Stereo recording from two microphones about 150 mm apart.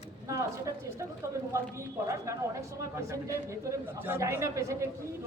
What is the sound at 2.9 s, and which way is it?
A woman's voice, 20° right (ahead or behind).